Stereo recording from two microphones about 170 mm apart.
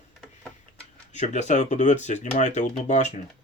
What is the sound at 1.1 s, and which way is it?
Speech, 45° left (ahead or behind).